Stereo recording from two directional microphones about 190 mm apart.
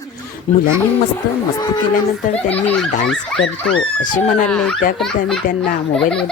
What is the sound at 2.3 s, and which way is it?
Speech, 10° left (ahead or behind).